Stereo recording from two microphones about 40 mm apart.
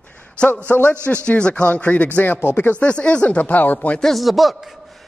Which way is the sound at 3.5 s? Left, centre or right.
Left.